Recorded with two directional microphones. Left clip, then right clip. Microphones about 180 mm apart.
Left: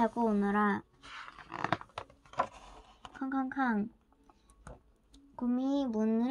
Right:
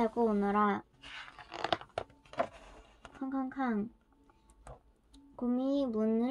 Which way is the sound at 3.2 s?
50° left (ahead or behind).